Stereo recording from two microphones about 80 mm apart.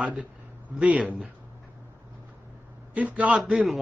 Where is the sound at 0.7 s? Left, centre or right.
Centre.